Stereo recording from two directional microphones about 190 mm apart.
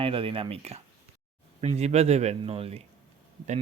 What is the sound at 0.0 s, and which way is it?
Speech, 30° right (ahead or behind).